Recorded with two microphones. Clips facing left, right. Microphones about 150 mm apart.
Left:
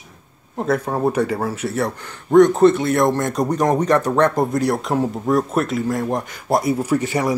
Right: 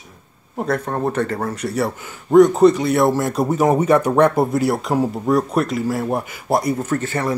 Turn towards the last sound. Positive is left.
turn(degrees=15)  # may be behind; listen again after turning